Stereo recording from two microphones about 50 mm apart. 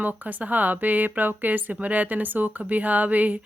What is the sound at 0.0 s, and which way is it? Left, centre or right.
Speech, right.